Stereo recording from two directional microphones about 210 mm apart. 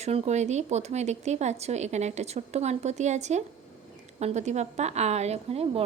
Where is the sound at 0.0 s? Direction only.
30° right (ahead or behind).